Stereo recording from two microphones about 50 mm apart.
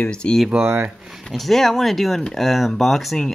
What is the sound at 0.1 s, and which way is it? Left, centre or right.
Speech, centre.